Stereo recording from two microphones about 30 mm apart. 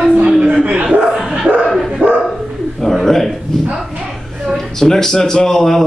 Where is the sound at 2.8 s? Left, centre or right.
Centre.